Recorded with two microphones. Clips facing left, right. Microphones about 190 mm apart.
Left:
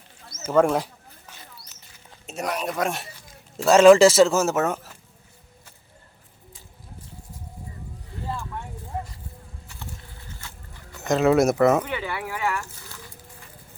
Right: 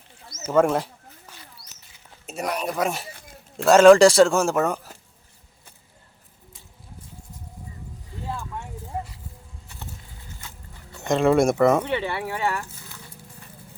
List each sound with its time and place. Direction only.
0.5 s speech: centre (ahead or behind)
2.2 s speech: centre (ahead or behind)
11.0 s speech: centre (ahead or behind)
11.9 s speech: 25° right (ahead or behind)